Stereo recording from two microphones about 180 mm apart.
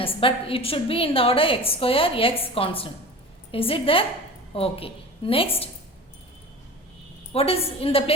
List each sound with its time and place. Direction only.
0.0 s a woman's voice: 30° left (ahead or behind)
7.3 s a woman's voice: 30° left (ahead or behind)